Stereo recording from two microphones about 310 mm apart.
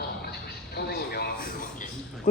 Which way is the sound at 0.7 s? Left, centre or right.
Left.